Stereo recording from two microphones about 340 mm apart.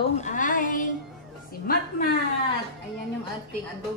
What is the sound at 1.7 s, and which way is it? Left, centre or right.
Speech, left.